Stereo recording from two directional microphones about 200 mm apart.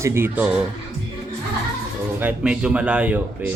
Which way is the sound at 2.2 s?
5° right (ahead or behind).